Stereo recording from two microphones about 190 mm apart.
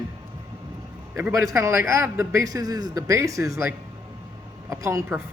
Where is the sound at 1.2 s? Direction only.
15° right (ahead or behind).